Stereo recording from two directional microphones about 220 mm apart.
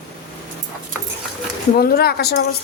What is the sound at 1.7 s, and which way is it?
Speech, 45° left (ahead or behind).